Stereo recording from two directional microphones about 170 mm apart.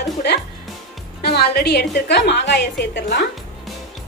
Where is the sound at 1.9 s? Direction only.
85° left.